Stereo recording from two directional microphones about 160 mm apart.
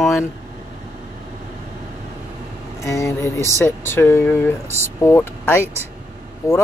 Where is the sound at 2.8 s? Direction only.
15° left (ahead or behind).